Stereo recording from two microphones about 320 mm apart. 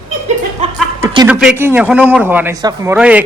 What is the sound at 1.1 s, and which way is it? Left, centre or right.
A man's voice, centre.